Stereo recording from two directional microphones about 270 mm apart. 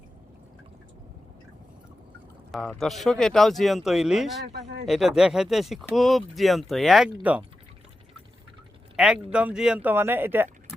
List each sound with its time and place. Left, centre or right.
2.5 s speech: centre
4.5 s speech: right
4.9 s speech: centre
9.0 s speech: centre